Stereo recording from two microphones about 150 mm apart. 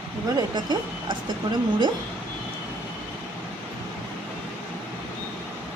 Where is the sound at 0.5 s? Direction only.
30° right (ahead or behind).